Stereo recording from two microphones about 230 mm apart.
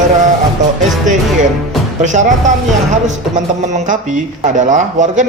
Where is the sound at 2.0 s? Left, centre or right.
Right.